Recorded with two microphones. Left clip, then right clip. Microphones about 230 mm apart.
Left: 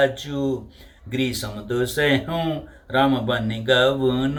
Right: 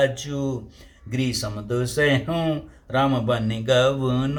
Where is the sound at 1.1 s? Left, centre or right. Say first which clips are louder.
Left 2 dB; centre.